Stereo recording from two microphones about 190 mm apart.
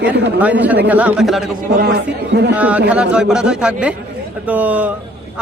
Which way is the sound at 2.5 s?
10° right (ahead or behind).